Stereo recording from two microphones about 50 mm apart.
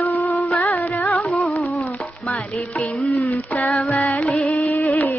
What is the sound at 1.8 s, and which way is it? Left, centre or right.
Music, left.